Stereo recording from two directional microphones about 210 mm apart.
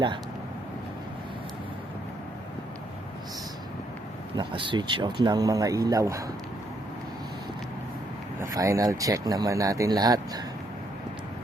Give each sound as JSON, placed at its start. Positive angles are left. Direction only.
{"t": 4.4, "sound": "speech", "side_deg": -25}
{"t": 8.4, "sound": "speech", "side_deg": -15}